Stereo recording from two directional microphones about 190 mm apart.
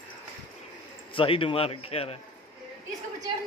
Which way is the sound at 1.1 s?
25° left (ahead or behind).